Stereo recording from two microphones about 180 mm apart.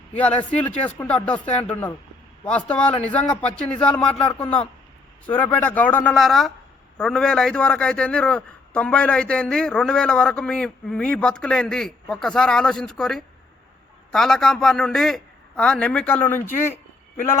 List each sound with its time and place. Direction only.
0.1 s a man's voice: 10° left (ahead or behind)